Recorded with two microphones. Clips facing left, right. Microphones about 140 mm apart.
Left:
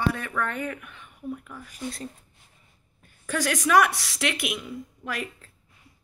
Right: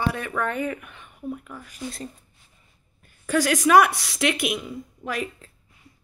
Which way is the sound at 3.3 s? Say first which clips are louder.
Right 5 dB; 5° right (ahead or behind).